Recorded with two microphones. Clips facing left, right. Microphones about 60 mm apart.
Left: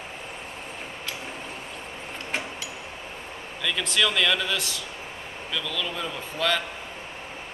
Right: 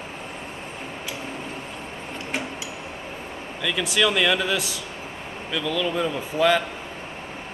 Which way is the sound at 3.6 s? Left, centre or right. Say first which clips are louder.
Right 3 dB; centre.